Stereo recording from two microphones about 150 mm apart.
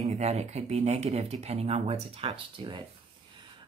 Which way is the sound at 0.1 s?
45° right (ahead or behind).